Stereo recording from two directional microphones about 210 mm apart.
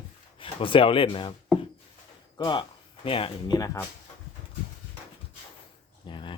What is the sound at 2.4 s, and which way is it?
Speech, 20° left (ahead or behind).